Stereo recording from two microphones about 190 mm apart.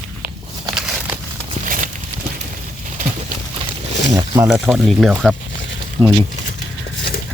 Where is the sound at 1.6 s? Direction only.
45° right (ahead or behind).